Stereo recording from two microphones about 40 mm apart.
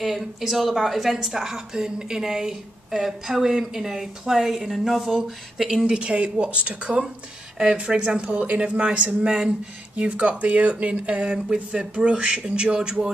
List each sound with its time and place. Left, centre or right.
0.0 s speech: centre
5.9 s speech: right